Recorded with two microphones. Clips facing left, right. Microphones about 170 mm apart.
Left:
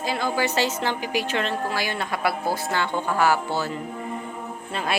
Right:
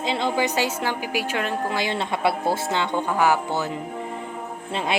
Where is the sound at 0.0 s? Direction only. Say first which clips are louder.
Right 2 dB; 25° right (ahead or behind).